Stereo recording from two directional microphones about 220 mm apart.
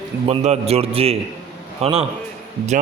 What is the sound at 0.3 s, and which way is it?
A man's voice, 30° right (ahead or behind).